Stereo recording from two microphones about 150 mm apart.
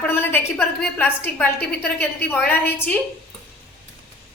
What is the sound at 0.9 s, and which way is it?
A woman's voice, 10° left (ahead or behind).